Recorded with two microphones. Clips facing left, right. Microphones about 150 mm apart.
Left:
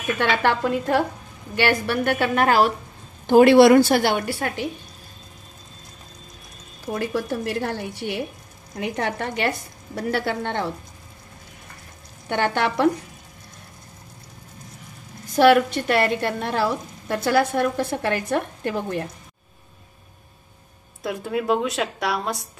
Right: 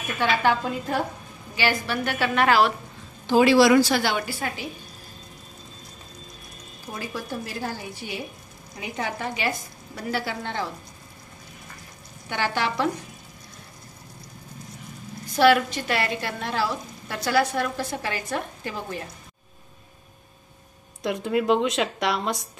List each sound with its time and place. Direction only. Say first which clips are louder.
0.2 s a woman's voice: left 1 dB; 65° left (ahead or behind)
1.5 s a woman's voice: left 4 dB; 60° left (ahead or behind); by 2.7 s 45° left (ahead or behind)
3.3 s a woman's voice: left 5 dB; 55° left (ahead or behind)
6.9 s a woman's voice: left 8 dB; 65° left (ahead or behind)
12.3 s a woman's voice: left 4 dB; 55° left (ahead or behind)
15.3 s a woman's voice: left 3 dB; 50° left (ahead or behind)
21.0 s a woman's voice: right 1 dB; centre (ahead or behind)